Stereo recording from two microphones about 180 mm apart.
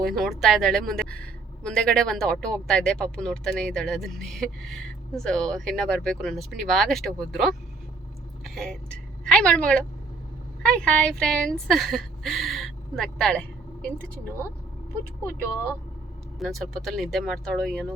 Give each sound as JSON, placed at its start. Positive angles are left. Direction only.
{"t": 0.0, "sound": "a woman's voice", "side_deg": 0}
{"t": 16.4, "sound": "a woman's voice", "side_deg": 0}